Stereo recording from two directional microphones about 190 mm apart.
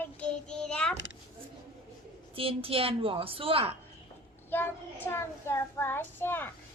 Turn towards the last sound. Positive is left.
turn(degrees=10)  # may be behind; listen again after turning